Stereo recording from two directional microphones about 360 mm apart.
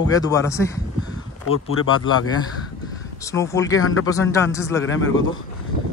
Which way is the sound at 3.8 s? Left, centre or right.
Left.